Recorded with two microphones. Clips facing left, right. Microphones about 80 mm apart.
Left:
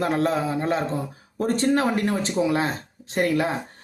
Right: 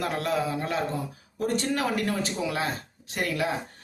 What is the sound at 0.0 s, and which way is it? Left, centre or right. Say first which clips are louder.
A man's voice: left 5 dB; left.